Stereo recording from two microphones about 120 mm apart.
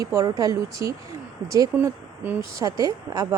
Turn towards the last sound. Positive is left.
turn(degrees=-30)  # may be behind; listen again after turning